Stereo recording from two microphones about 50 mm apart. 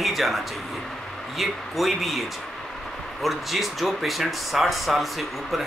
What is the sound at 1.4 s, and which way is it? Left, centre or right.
Speech, centre.